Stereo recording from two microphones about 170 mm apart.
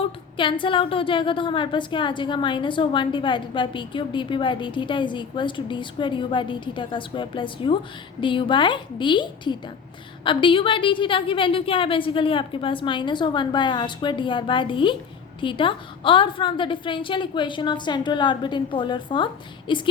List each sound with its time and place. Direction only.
0.3 s a woman's voice: 30° left (ahead or behind)